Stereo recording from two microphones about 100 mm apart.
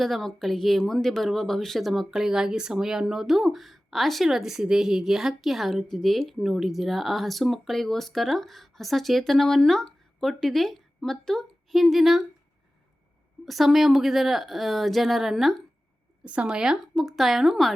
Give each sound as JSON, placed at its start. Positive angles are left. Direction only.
{"t": 0.0, "sound": "speech", "side_deg": 0}
{"t": 13.4, "sound": "speech", "side_deg": 0}
{"t": 16.2, "sound": "speech", "side_deg": -10}